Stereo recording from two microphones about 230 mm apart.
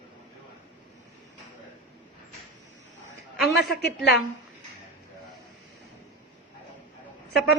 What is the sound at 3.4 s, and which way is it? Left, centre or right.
Speech, centre.